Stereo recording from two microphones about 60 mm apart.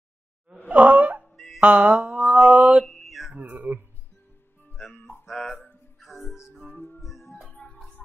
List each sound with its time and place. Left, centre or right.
0.7 s wail: right
1.2 s music: centre
1.6 s mantra: right
2.8 s a sound: centre
3.3 s speech: right
5.2 s music: centre
6.7 s music: left
7.0 s music: centre
7.4 s music: left